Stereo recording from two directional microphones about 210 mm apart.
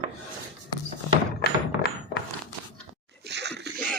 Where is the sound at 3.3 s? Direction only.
55° right (ahead or behind).